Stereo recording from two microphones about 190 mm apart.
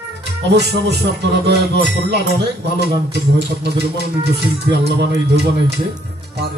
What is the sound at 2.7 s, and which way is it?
Speech, 60° right (ahead or behind).